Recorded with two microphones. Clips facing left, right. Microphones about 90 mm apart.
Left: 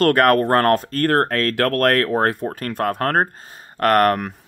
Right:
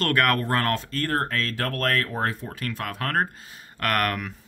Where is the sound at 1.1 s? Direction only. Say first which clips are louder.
Left 7 dB; 60° left (ahead or behind); by 4.3 s 40° left (ahead or behind).